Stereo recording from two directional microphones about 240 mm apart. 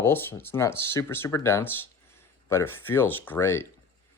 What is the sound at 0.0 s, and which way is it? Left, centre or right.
Speech, centre.